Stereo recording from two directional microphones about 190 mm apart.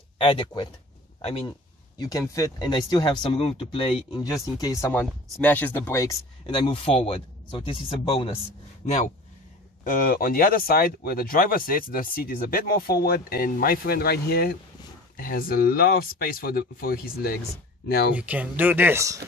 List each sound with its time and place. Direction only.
0.2 s speech: 25° left (ahead or behind)
2.0 s speech: 20° left (ahead or behind); by 9.1 s 40° left (ahead or behind)
9.8 s speech: 50° left (ahead or behind)
18.1 s speech: 10° right (ahead or behind)